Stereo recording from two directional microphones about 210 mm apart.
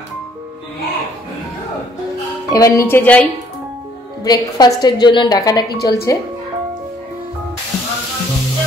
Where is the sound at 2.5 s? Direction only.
15° left (ahead or behind).